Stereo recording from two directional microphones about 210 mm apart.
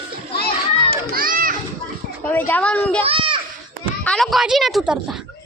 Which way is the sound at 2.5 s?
5° left (ahead or behind).